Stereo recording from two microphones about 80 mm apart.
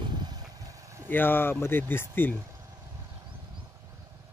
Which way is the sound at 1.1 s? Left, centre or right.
Left.